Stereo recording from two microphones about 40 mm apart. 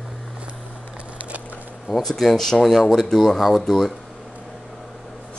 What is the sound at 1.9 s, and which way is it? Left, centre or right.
Speech, centre.